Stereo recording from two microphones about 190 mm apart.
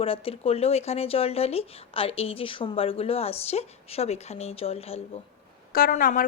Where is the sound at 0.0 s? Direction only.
30° left (ahead or behind).